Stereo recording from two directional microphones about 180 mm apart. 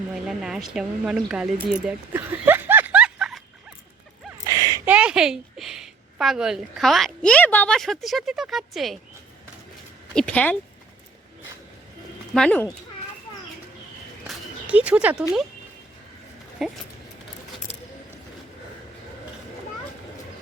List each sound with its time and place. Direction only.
0.3 s speech: centre (ahead or behind)
4.5 s a sound: 20° right (ahead or behind)
4.9 s a woman's voice: 5° right (ahead or behind)
10.2 s speech: 5° left (ahead or behind)
12.3 s speech: 5° left (ahead or behind)
14.3 s a sound: 5° right (ahead or behind)
16.6 s speech: centre (ahead or behind)